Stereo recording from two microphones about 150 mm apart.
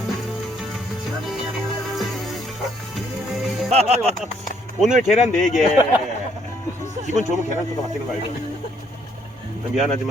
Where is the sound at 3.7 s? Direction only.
45° right (ahead or behind).